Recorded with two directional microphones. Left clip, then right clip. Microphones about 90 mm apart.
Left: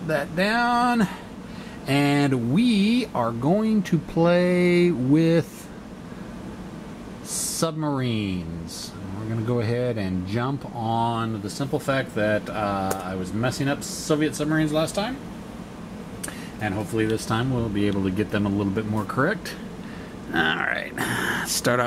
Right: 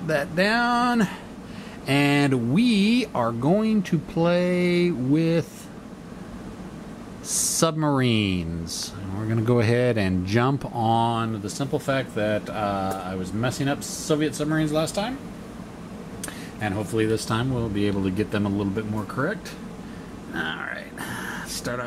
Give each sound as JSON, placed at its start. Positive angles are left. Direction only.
{"t": 0.1, "sound": "speech", "side_deg": -5}
{"t": 7.6, "sound": "speech", "side_deg": -15}
{"t": 10.9, "sound": "speech", "side_deg": -5}
{"t": 16.6, "sound": "speech", "side_deg": -10}
{"t": 18.9, "sound": "speech", "side_deg": 20}
{"t": 20.3, "sound": "speech", "side_deg": 30}